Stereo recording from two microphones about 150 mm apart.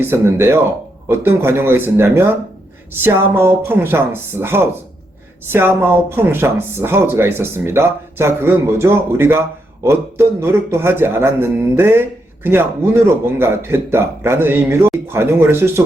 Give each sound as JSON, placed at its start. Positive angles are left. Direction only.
{"t": 0.0, "sound": "a man's voice", "side_deg": -15}